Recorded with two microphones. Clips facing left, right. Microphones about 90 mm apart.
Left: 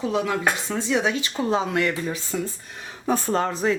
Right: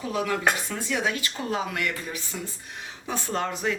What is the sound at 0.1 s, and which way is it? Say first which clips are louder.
Speech: right 1 dB; 20° left (ahead or behind).